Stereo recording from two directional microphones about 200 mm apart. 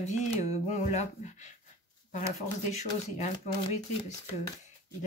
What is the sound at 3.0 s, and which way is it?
Speech, 35° left (ahead or behind).